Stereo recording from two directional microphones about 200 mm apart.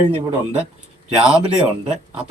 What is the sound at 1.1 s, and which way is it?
Speech, 5° right (ahead or behind).